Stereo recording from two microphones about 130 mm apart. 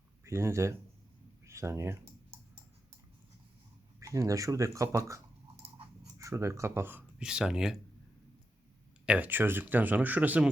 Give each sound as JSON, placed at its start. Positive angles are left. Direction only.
{"t": 0.3, "sound": "speech", "side_deg": -20}
{"t": 1.5, "sound": "typing", "side_deg": -20}
{"t": 4.0, "sound": "speech", "side_deg": -25}
{"t": 9.0, "sound": "speech", "side_deg": -10}